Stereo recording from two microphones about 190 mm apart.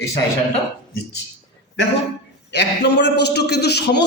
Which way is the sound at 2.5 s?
65° left (ahead or behind).